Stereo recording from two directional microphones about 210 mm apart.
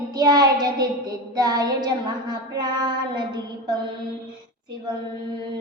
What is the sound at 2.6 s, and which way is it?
A child's voice, 20° right (ahead or behind).